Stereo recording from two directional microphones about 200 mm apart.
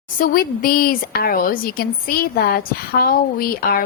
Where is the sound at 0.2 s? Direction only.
50° left (ahead or behind).